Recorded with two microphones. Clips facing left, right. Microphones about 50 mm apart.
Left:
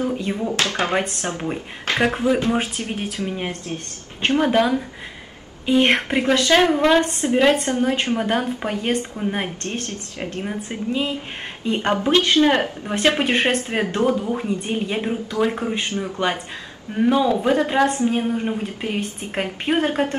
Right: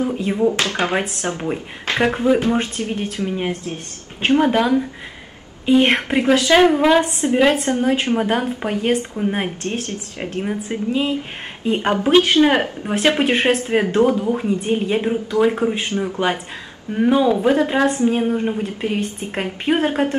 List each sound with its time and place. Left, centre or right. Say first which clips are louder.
0.0 s a woman's voice: right 5 dB; centre
0.6 s speech: right 1 dB; right
2.0 s a woman's voice: right 3 dB; centre
2.9 s speech: right 3 dB; centre
3.3 s a woman's voice: right 3 dB; centre